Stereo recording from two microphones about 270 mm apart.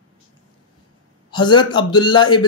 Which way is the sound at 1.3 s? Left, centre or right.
Centre.